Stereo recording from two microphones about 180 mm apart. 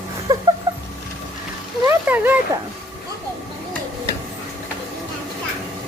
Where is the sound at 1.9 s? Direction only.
10° right (ahead or behind).